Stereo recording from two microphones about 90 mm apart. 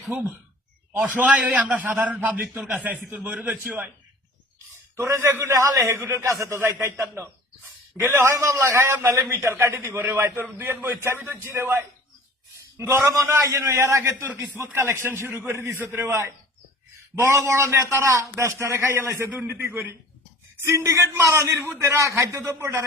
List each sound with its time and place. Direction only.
0.1 s a man's voice: 20° right (ahead or behind)
4.9 s a man's voice: 35° right (ahead or behind)